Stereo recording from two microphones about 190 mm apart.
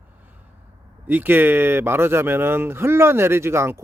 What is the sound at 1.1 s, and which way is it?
Speech, 10° right (ahead or behind).